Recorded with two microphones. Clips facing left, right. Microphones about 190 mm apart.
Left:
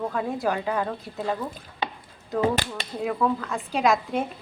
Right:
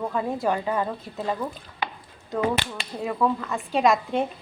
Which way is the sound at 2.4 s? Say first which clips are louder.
Left 1 dB; 35° left (ahead or behind).